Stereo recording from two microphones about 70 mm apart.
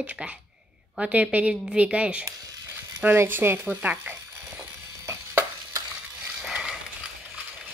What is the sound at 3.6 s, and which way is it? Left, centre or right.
Speech, right.